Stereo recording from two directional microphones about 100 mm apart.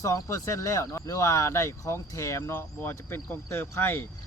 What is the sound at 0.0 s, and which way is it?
Speech, 30° left (ahead or behind).